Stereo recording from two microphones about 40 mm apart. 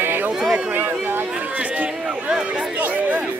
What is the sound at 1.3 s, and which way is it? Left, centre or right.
Speech, right.